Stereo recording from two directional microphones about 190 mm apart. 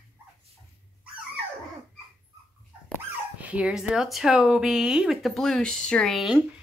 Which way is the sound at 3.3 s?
5° right (ahead or behind).